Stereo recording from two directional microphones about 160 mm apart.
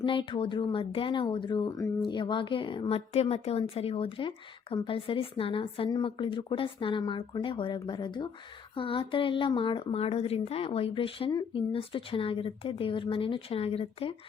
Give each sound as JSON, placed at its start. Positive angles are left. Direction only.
{"t": 0.0, "sound": "speech", "side_deg": 30}
{"t": 11.3, "sound": "speech", "side_deg": 25}
{"t": 11.7, "sound": "speech", "side_deg": 35}